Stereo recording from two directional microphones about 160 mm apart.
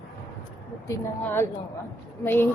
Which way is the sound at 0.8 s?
15° left (ahead or behind).